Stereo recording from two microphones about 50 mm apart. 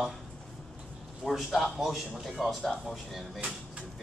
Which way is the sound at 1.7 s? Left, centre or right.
Centre.